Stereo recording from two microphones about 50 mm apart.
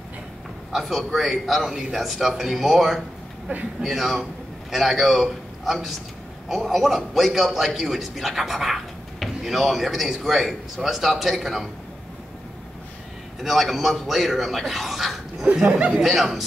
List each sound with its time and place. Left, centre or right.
0.7 s a man's voice: centre
13.4 s a man's voice: centre
15.7 s speech: right
16.0 s a man's voice: centre